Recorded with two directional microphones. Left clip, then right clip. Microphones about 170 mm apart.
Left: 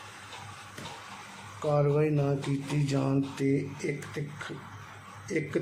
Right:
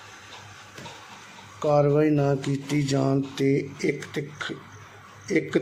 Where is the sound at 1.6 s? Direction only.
30° right (ahead or behind).